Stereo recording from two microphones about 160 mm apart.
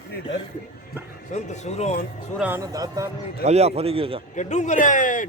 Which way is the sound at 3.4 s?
40° right (ahead or behind).